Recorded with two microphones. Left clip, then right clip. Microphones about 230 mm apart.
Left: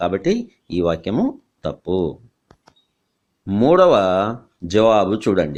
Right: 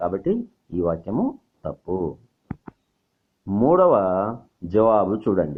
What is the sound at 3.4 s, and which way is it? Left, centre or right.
Speech, left.